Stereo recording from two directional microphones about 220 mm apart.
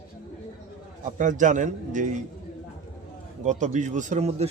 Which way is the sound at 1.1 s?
35° right (ahead or behind).